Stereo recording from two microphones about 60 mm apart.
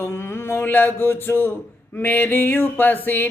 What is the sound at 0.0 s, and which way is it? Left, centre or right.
Speech, left.